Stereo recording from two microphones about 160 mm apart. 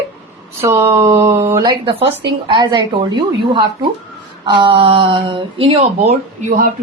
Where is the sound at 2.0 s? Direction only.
90° right.